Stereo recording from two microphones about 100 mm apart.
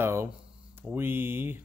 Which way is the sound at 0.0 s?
25° right (ahead or behind).